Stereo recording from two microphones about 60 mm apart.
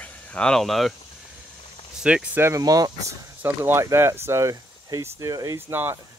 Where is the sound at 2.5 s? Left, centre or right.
Right.